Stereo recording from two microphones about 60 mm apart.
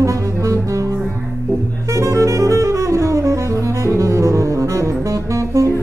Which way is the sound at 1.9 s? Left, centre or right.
Right.